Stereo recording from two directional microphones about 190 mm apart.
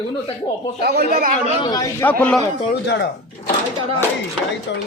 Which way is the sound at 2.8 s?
65° left (ahead or behind).